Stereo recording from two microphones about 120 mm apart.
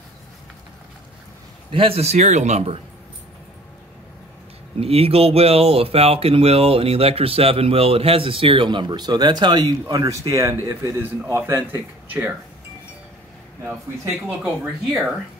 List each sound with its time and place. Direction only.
1.7 s a man's voice: 50° right (ahead or behind)
4.7 s speech: 55° right (ahead or behind); by 12.4 s 15° right (ahead or behind)
14.2 s speech: 10° right (ahead or behind)